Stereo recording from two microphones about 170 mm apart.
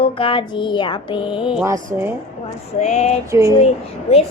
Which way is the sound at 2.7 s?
40° left (ahead or behind).